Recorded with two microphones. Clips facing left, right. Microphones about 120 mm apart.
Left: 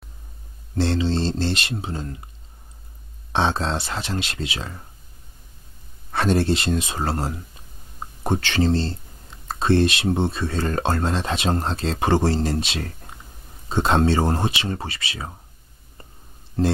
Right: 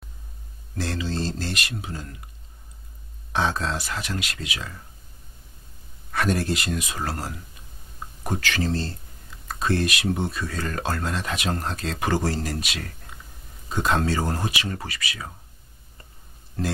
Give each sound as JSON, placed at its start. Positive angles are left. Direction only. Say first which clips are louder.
{"t": 0.7, "sound": "speech", "louder": "left 6 dB", "side_deg": 30}
{"t": 3.3, "sound": "speech", "louder": "left 3 dB", "side_deg": 30}
{"t": 6.1, "sound": "speech", "louder": "left 4 dB", "side_deg": 30}
{"t": 16.6, "sound": "speech", "louder": "left 7 dB", "side_deg": 25}